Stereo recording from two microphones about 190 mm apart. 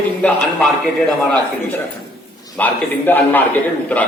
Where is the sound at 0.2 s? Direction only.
5° left (ahead or behind).